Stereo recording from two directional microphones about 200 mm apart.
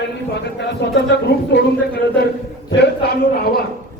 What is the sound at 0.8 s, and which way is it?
Speech, 55° left (ahead or behind).